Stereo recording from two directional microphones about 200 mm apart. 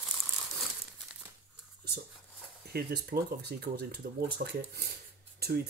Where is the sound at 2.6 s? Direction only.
50° right (ahead or behind).